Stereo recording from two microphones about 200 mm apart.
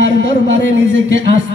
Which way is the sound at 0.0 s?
65° right (ahead or behind).